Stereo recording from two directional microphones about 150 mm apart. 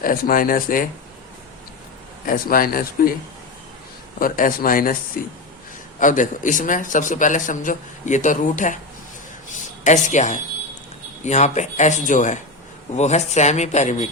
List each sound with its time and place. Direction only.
0.0 s speech: 70° left (ahead or behind)
2.2 s speech: 70° left (ahead or behind)
4.2 s speech: 65° left (ahead or behind)
6.0 s a man's voice: 60° left (ahead or behind)